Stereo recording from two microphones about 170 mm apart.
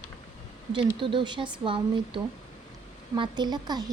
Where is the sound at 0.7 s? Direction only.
30° right (ahead or behind).